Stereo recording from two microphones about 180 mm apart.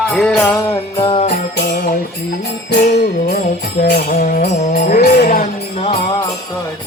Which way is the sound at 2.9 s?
60° left (ahead or behind).